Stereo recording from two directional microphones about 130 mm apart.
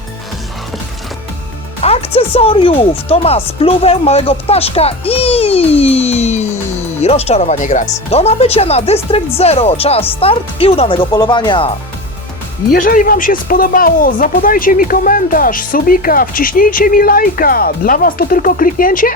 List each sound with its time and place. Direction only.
1.8 s speech: 50° left (ahead or behind)
12.7 s speech: 90° left